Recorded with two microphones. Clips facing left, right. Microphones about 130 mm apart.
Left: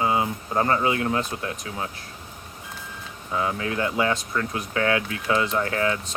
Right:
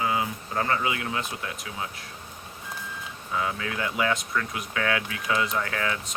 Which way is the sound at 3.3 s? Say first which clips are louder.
Left 4 dB; 30° left (ahead or behind).